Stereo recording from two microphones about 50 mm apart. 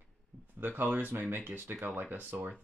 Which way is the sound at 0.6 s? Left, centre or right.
Right.